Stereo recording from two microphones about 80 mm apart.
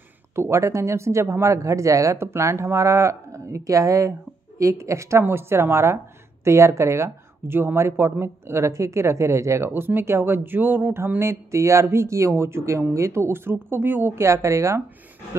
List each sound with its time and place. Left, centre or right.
0.4 s speech: right
9.7 s speech: right